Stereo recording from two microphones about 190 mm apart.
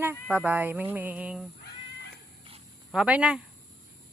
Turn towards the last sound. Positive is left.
turn(degrees=-5)  # may be behind; listen again after turning